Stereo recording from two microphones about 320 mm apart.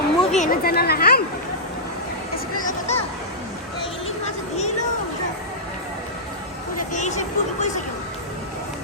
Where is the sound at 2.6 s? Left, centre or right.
Left.